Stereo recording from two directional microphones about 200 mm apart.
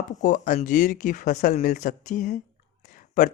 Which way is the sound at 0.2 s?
40° left (ahead or behind).